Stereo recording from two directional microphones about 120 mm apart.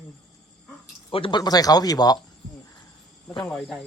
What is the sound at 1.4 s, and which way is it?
Speech, 30° left (ahead or behind).